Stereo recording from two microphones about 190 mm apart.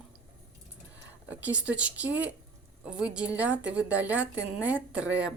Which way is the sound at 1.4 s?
5° right (ahead or behind).